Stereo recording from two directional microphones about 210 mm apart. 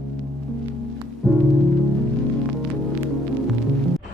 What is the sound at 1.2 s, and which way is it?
Music, centre (ahead or behind).